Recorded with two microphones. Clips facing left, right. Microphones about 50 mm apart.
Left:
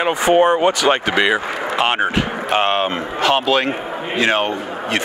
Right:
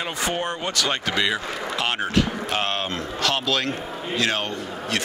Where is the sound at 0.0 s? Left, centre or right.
Left.